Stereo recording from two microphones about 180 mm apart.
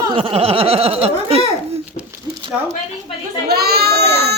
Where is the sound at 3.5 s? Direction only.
60° right (ahead or behind).